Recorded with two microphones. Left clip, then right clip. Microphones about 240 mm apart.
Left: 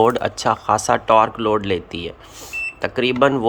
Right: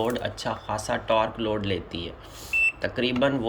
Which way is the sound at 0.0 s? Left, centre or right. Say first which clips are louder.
Left 11 dB; centre.